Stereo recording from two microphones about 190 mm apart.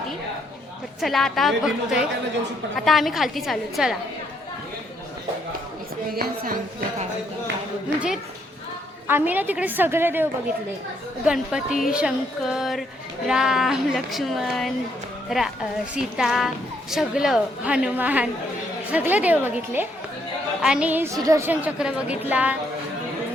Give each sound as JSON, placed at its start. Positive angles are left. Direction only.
{"t": 1.0, "sound": "speech", "side_deg": 0}
{"t": 6.1, "sound": "speech", "side_deg": -50}
{"t": 7.9, "sound": "a woman's voice", "side_deg": -5}
{"t": 11.3, "sound": "a woman's voice", "side_deg": -5}